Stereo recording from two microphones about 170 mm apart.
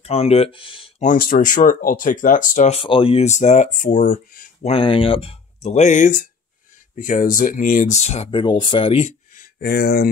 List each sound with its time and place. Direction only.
0.0 s speech: 35° left (ahead or behind)
1.0 s speech: 55° left (ahead or behind)
4.6 s speech: 30° left (ahead or behind)
9.6 s speech: 70° left (ahead or behind)